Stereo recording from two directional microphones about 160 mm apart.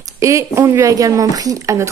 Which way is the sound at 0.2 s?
20° right (ahead or behind).